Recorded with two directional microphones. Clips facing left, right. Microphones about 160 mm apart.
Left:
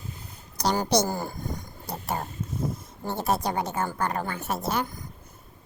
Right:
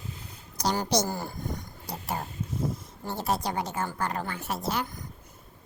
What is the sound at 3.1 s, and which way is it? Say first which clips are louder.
A woman's voice: left 3 dB; 55° left (ahead or behind).